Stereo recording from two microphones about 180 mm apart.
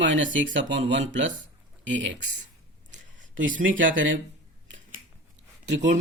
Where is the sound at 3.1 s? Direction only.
90° right.